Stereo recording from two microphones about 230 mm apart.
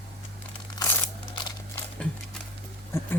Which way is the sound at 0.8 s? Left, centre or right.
Centre.